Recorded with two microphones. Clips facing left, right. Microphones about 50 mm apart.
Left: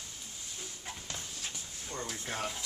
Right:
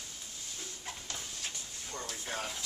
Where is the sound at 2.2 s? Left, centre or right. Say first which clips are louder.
Left 1 dB; centre.